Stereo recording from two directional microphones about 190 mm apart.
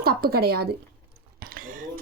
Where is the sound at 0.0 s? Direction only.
55° right (ahead or behind).